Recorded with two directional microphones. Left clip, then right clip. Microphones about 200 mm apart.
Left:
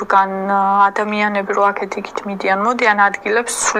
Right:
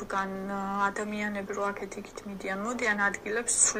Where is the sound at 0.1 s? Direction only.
45° left (ahead or behind).